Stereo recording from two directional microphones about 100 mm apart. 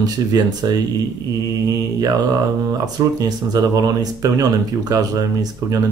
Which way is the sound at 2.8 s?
40° right (ahead or behind).